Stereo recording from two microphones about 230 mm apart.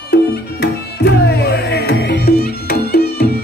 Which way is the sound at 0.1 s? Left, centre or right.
Left.